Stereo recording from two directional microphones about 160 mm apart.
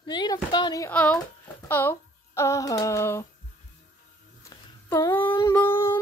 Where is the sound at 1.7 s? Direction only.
15° left (ahead or behind).